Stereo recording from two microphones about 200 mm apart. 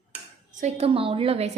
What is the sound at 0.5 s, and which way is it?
Speech, 35° right (ahead or behind).